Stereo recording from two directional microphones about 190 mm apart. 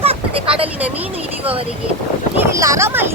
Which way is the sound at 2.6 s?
15° right (ahead or behind).